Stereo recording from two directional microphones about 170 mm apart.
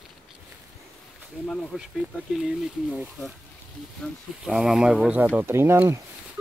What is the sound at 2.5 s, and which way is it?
Speech, 5° right (ahead or behind).